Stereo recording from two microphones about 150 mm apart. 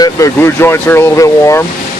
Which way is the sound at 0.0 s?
20° left (ahead or behind).